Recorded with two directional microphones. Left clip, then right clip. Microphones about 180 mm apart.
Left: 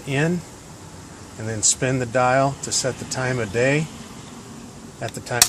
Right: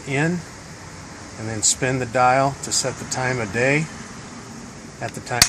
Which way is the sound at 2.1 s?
60° left (ahead or behind).